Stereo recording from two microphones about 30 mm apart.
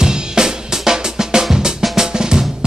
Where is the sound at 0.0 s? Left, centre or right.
Right.